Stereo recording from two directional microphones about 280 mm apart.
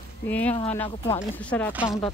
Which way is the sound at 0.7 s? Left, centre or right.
Centre.